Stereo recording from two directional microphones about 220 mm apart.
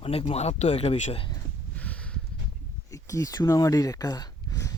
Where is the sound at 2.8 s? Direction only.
15° left (ahead or behind).